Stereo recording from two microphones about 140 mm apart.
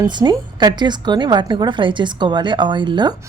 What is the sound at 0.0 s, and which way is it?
A woman's voice, 30° right (ahead or behind).